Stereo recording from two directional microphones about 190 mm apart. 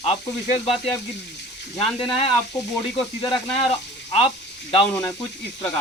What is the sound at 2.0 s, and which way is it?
Speech, 30° left (ahead or behind).